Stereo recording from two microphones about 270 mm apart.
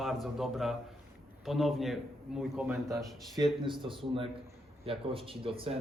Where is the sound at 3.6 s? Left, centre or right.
Centre.